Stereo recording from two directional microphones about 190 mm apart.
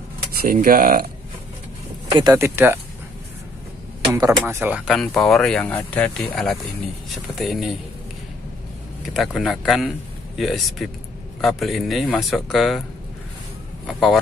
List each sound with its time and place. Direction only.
0.5 s speech: 45° right (ahead or behind)
2.1 s speech: 15° right (ahead or behind)
4.1 s speech: 15° right (ahead or behind)
9.1 s speech: centre (ahead or behind)
13.8 s speech: centre (ahead or behind)